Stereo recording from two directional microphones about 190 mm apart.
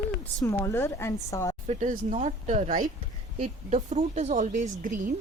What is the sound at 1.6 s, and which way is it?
A woman's voice, 35° right (ahead or behind).